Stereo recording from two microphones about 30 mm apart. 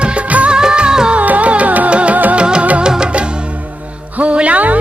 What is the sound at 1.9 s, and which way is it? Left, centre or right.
Music, right.